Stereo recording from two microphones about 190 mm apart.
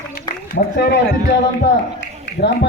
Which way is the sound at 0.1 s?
55° left (ahead or behind).